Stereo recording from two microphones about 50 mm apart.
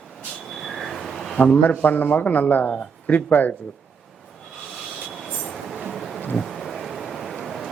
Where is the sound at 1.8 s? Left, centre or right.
Left.